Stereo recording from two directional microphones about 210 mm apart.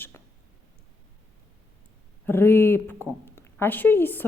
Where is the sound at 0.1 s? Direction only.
10° left (ahead or behind).